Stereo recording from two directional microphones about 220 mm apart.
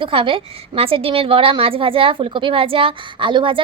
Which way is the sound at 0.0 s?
25° right (ahead or behind).